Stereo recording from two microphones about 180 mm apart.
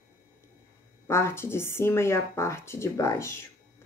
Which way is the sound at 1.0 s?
15° left (ahead or behind).